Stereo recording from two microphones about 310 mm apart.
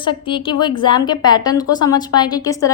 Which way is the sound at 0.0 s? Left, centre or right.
Centre.